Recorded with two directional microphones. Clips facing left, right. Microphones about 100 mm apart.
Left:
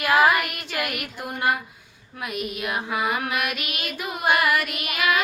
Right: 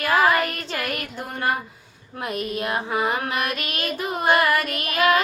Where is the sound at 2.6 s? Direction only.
35° right (ahead or behind).